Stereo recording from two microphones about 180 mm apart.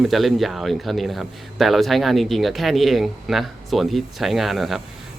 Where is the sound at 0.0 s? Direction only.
Centre (ahead or behind).